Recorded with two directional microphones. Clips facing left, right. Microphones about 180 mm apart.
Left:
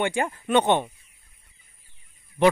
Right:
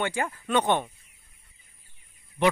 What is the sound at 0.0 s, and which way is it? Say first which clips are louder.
Speech: left 4 dB; 25° left (ahead or behind).